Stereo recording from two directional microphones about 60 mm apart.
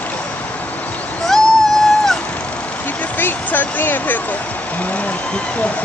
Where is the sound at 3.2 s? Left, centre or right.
Left.